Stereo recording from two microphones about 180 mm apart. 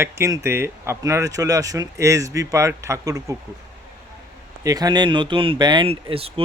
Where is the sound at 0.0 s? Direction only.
15° right (ahead or behind).